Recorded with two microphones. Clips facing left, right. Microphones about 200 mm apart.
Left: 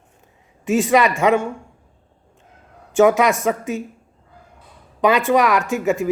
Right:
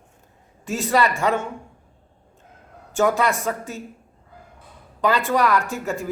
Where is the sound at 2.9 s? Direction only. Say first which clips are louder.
Left 6 dB; 15° left (ahead or behind).